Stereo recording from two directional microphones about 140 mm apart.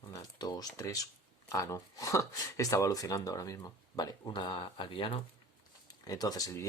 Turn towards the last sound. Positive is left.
turn(degrees=25)  # may be behind; listen again after turning